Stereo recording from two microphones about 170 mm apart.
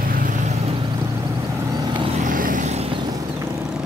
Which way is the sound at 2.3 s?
55° right (ahead or behind).